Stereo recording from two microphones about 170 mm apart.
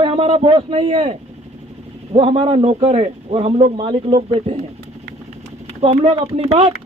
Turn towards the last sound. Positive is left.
turn(degrees=-40)  # may be behind; listen again after turning